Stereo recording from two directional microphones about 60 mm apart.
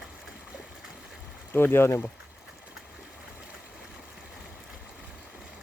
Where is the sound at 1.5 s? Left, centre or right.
Left.